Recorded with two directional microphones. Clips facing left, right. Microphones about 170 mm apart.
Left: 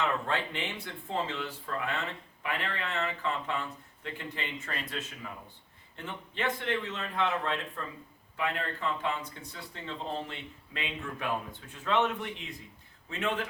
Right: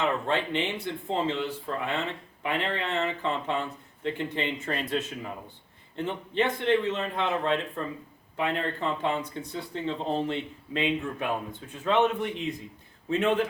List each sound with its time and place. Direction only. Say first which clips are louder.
0.0 s speech: right 4 dB; 20° right (ahead or behind)